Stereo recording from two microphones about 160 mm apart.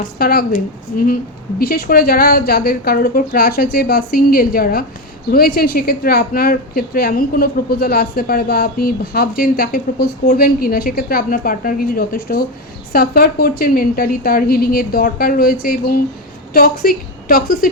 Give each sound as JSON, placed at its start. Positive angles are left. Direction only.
{"t": 0.0, "sound": "a woman's voice", "side_deg": 70}